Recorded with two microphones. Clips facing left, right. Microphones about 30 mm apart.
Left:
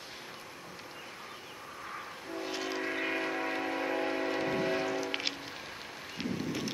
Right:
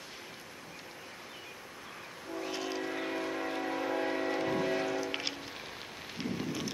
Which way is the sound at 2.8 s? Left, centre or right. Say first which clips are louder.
Left 2 dB; left.